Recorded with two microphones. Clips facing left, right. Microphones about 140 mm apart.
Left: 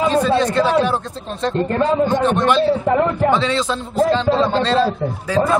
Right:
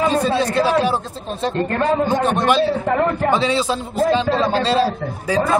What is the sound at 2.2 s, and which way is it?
Speech, 10° right (ahead or behind).